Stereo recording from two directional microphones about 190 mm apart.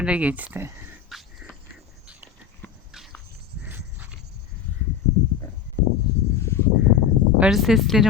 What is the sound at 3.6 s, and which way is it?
Horse, 10° right (ahead or behind).